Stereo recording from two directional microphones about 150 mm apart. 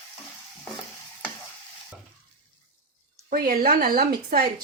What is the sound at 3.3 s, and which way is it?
A woman's voice, 70° right (ahead or behind).